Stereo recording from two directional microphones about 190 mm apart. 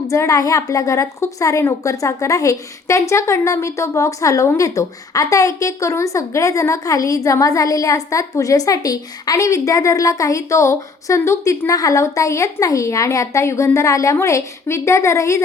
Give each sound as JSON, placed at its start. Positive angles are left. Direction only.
{"t": 0.1, "sound": "a woman's voice", "side_deg": 15}